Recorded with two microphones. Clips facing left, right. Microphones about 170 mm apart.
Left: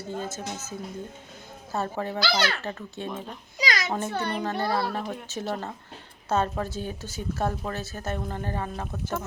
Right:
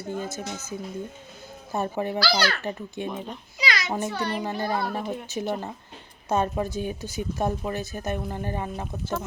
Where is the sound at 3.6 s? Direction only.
40° left (ahead or behind).